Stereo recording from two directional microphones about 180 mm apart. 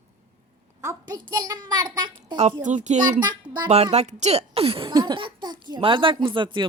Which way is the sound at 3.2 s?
25° right (ahead or behind).